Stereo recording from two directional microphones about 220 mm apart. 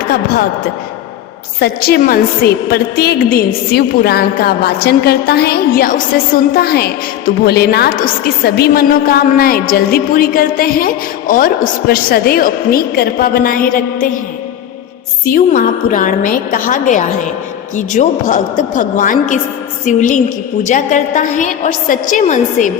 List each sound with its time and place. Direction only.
1.5 s a woman's voice: 45° left (ahead or behind)
15.2 s a woman's voice: 40° left (ahead or behind)